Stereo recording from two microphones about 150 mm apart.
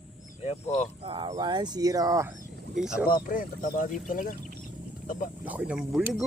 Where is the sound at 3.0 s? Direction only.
70° left (ahead or behind).